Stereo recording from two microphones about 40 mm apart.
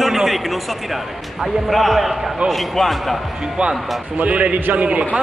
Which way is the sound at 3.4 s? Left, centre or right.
Right.